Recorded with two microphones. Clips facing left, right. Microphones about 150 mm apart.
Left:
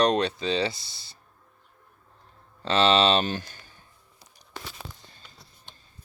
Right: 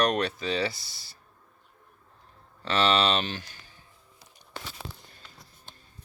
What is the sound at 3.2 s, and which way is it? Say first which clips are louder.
Speech: left 5 dB; 45° left (ahead or behind).